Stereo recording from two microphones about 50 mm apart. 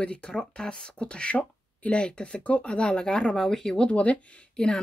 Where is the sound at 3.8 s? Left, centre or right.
Left.